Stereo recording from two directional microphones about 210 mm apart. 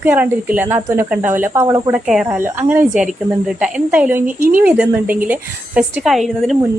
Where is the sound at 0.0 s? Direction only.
10° right (ahead or behind).